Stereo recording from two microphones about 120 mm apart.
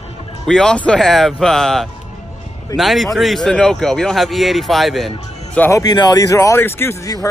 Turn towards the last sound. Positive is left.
turn(degrees=20)  # may be behind; listen again after turning